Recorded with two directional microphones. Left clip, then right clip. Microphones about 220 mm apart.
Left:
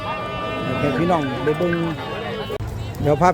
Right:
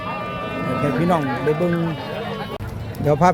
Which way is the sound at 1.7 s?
25° left (ahead or behind).